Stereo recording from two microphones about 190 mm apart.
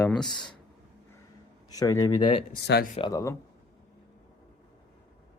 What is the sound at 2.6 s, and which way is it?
Speech, 60° left (ahead or behind).